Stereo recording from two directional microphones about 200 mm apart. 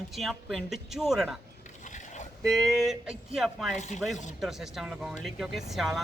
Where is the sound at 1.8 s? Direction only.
35° left (ahead or behind).